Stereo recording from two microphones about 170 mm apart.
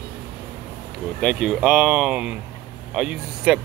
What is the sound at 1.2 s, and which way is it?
Speech, centre (ahead or behind).